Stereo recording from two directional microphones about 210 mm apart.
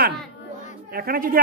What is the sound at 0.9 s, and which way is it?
Speech, 45° right (ahead or behind).